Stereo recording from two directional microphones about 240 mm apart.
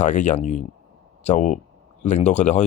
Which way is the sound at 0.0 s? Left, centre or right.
Left.